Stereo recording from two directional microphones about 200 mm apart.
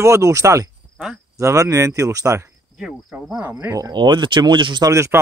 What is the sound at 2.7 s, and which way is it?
Speech, 5° right (ahead or behind).